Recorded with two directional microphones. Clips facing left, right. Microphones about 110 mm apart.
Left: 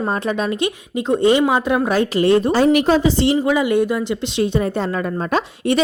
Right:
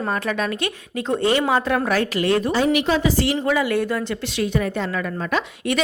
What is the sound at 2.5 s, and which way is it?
A woman's voice, 40° left (ahead or behind).